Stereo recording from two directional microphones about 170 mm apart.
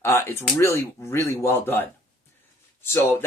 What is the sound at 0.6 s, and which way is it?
Speech, 15° left (ahead or behind).